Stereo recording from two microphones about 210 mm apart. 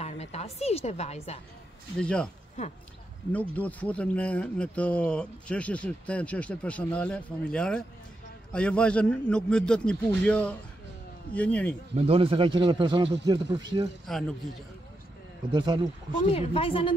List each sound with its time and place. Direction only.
0.0 s a woman's voice: 30° left (ahead or behind)
2.0 s speech: 5° left (ahead or behind)
3.3 s speech: 5° left (ahead or behind)
11.9 s a man's voice: 30° right (ahead or behind)
14.1 s speech: centre (ahead or behind)
15.5 s a man's voice: 20° right (ahead or behind)
16.3 s a woman's voice: 25° left (ahead or behind)